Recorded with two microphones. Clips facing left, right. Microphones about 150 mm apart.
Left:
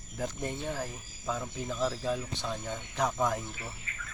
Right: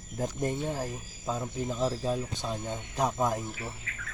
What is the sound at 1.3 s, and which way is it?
Speech, 25° right (ahead or behind).